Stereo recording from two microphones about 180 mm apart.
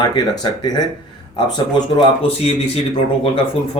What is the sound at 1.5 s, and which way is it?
Speech, 25° left (ahead or behind).